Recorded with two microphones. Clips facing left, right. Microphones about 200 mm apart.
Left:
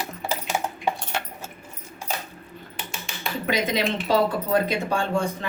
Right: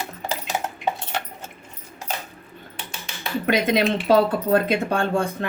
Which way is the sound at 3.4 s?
60° right (ahead or behind).